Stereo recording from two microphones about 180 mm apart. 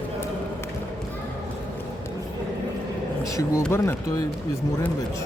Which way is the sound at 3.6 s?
15° left (ahead or behind).